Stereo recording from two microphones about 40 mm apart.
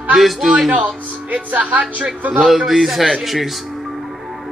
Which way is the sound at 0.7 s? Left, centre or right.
Right.